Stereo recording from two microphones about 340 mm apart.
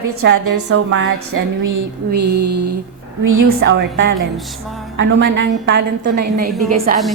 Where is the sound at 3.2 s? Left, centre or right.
Right.